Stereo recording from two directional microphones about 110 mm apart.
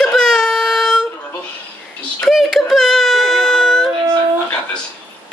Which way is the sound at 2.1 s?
Centre (ahead or behind).